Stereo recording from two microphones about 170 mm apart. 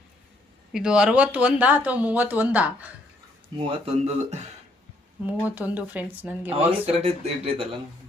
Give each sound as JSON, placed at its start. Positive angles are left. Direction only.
{"t": 0.7, "sound": "speech", "side_deg": -5}
{"t": 3.7, "sound": "speech", "side_deg": -35}
{"t": 5.5, "sound": "speech", "side_deg": -10}
{"t": 6.8, "sound": "speech", "side_deg": -35}